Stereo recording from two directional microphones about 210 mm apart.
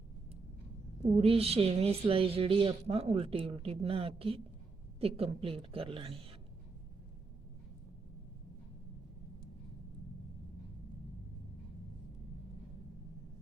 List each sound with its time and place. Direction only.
1.0 s speech: 30° right (ahead or behind)